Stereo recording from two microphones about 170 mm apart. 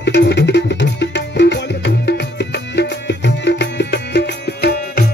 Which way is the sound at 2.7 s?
90° left.